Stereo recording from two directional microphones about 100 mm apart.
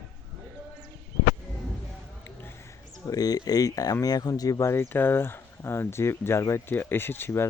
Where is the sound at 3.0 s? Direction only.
40° left (ahead or behind).